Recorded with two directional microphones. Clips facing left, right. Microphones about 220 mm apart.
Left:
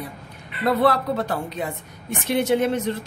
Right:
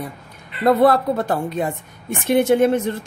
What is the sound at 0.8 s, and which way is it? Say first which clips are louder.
A woman's voice: right 4 dB; 50° right (ahead or behind).